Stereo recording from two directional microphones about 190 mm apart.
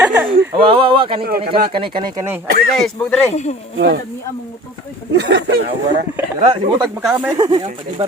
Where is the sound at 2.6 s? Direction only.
Centre (ahead or behind).